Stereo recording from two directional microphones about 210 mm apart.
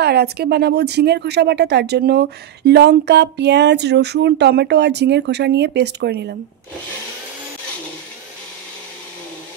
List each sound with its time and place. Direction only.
0.0 s speech: 50° right (ahead or behind)